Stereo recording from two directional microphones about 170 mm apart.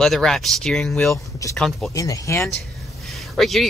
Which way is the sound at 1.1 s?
20° left (ahead or behind).